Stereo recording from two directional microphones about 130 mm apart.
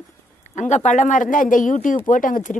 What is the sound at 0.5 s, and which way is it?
Speech, 65° left (ahead or behind).